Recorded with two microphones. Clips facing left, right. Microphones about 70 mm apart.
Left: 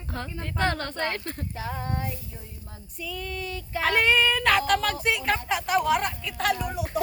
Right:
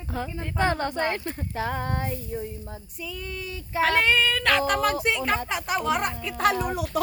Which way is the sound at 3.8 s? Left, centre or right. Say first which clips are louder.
Even; centre.